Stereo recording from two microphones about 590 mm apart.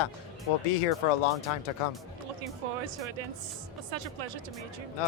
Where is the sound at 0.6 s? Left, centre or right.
Left.